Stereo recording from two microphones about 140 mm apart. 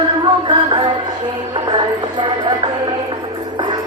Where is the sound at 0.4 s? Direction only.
35° right (ahead or behind).